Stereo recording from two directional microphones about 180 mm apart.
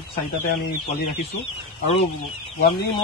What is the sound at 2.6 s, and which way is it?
Speech, 65° left (ahead or behind).